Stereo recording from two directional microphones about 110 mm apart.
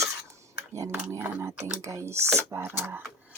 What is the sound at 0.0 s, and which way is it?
Cutlery, 25° right (ahead or behind).